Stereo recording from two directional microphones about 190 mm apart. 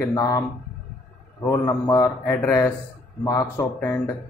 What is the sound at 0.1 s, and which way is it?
Speech, 20° left (ahead or behind).